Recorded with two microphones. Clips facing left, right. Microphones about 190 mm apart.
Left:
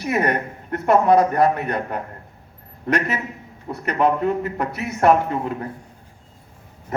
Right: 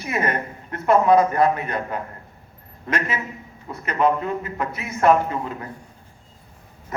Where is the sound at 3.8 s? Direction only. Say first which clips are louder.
Left 2 dB; 65° left (ahead or behind).